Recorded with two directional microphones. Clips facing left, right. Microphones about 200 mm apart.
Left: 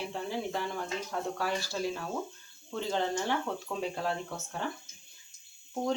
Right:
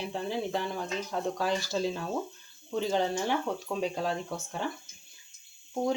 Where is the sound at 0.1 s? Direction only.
15° right (ahead or behind).